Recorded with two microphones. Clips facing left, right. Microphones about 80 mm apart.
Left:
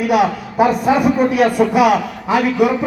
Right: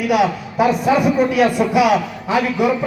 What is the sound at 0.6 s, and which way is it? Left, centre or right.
A man's voice, left.